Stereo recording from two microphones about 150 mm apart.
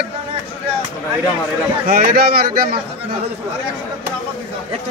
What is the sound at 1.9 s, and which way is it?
Speech, 80° right.